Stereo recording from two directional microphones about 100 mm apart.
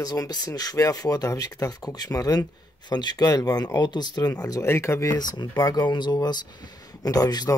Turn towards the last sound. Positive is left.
turn(degrees=40)  # may be behind; listen again after turning